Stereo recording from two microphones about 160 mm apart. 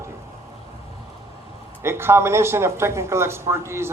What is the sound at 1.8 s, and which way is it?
A man's voice, 15° right (ahead or behind).